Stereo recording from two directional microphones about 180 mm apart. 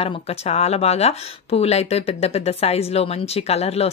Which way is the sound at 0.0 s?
35° left (ahead or behind).